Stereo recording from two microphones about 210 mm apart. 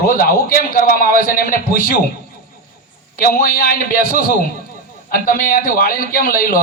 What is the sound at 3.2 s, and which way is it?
A man's voice, 45° left (ahead or behind).